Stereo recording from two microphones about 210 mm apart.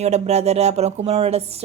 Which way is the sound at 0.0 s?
30° right (ahead or behind).